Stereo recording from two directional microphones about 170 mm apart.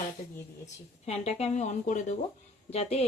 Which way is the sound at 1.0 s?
40° left (ahead or behind).